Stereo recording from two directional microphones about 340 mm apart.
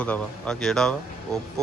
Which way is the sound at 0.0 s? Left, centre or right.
Centre.